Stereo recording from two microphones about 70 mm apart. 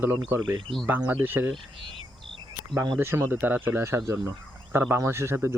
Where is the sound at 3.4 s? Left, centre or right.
Right.